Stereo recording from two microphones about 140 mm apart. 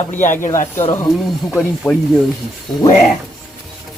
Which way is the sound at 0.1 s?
60° left (ahead or behind).